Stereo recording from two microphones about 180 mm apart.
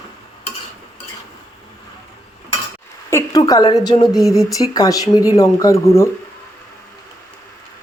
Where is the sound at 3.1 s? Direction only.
20° left (ahead or behind).